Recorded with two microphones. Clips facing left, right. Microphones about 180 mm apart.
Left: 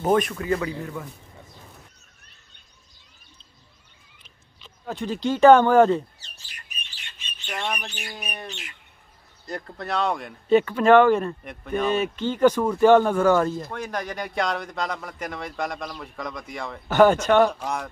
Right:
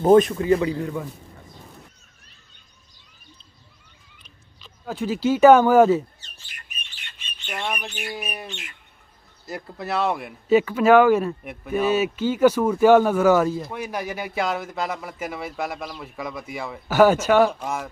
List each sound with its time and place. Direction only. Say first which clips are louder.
0.0 s a man's voice: right 7 dB; 25° right (ahead or behind)
4.2 s rodents: right 1 dB; 20° left (ahead or behind)
4.8 s speech: right 3 dB; 5° right (ahead or behind)
7.4 s speech: right 1 dB; 5° right (ahead or behind)